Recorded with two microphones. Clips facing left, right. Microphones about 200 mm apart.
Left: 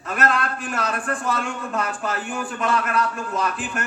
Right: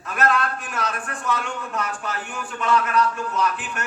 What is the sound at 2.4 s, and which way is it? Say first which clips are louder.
A man's voice: right 3 dB; 35° left (ahead or behind).